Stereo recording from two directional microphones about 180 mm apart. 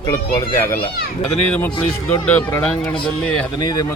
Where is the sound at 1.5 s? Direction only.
10° left (ahead or behind).